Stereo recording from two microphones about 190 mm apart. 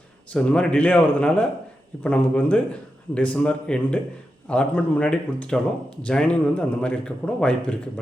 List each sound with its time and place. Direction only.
0.3 s a man's voice: 5° left (ahead or behind)